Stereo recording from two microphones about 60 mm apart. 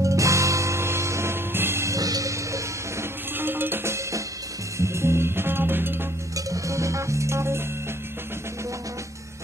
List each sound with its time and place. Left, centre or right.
0.0 s music: right
1.9 s music: right
3.3 s music: right
4.7 s music: right
6.3 s music: right